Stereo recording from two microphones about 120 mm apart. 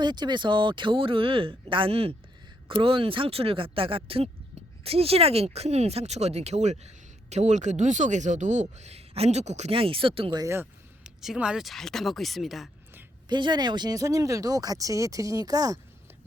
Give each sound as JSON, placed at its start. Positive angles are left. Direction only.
{"t": 0.0, "sound": "speech", "side_deg": -40}
{"t": 9.7, "sound": "speech", "side_deg": -50}
{"t": 10.3, "sound": "speech", "side_deg": -25}
{"t": 11.0, "sound": "speech", "side_deg": -5}
{"t": 13.2, "sound": "speech", "side_deg": -40}